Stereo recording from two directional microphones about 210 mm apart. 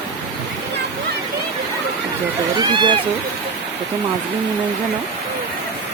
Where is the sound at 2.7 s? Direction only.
20° right (ahead or behind).